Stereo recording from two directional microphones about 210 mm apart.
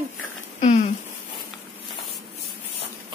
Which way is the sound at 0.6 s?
35° left (ahead or behind).